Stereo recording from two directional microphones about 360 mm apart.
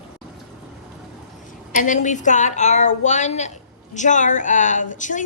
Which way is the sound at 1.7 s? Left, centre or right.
Left.